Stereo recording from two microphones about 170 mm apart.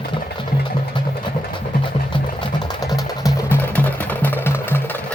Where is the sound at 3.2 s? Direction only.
10° left (ahead or behind).